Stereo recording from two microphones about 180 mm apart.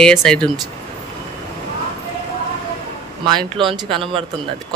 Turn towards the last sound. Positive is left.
turn(degrees=-30)  # may be behind; listen again after turning